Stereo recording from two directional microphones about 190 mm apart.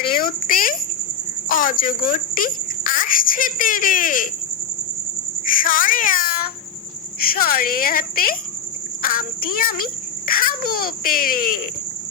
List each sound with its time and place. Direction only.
0.1 s a child's voice: 50° left (ahead or behind)
5.5 s a child's voice: 45° left (ahead or behind)